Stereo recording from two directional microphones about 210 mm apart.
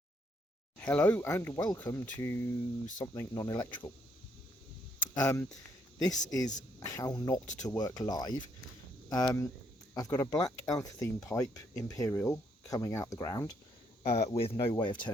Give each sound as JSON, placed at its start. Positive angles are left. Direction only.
{"t": 0.8, "sound": "speech", "side_deg": 5}
{"t": 5.1, "sound": "speech", "side_deg": 15}
{"t": 14.0, "sound": "speech", "side_deg": 30}